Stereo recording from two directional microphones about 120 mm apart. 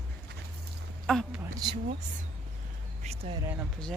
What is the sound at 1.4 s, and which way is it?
Speech, 30° right (ahead or behind).